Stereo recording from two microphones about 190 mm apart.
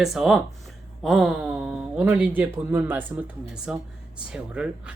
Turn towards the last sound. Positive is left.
turn(degrees=-5)  # may be behind; listen again after turning